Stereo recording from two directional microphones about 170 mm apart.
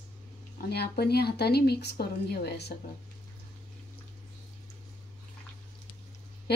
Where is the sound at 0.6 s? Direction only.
70° left (ahead or behind).